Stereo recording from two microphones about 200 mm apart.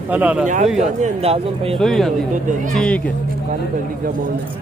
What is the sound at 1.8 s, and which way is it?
Speech, centre (ahead or behind).